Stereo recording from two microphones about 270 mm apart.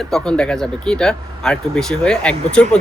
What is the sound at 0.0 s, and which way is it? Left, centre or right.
Speech, centre.